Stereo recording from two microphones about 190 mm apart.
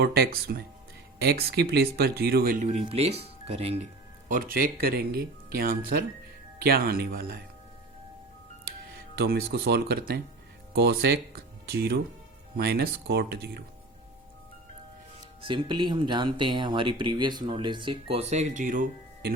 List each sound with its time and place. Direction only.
0.0 s speech: 55° right (ahead or behind)
2.6 s speech: 35° right (ahead or behind)
4.3 s speech: 50° right (ahead or behind)
9.1 s speech: 55° right (ahead or behind)
15.4 s speech: 25° right (ahead or behind); by 19.3 s 45° right (ahead or behind)